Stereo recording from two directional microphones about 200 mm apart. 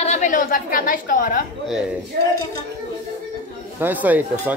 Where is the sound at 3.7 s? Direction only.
10° right (ahead or behind).